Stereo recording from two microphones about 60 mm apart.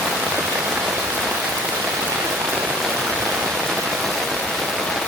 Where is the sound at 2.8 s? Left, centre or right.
Centre.